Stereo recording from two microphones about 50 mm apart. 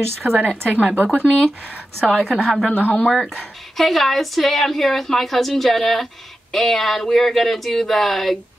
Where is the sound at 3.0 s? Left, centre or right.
Centre.